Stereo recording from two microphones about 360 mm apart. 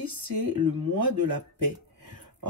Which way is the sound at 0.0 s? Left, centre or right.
Right.